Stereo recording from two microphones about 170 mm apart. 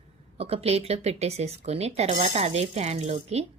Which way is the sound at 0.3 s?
35° right (ahead or behind).